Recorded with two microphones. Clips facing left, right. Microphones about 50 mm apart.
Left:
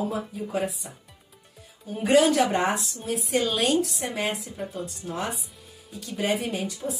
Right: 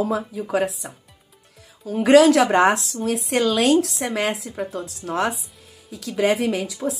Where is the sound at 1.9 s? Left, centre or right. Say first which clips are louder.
Right 7 dB; right.